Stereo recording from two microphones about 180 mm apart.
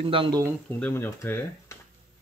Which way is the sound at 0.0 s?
30° right (ahead or behind).